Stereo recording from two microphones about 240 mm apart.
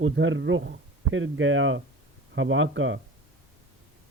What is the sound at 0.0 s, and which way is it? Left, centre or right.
A man's voice, right.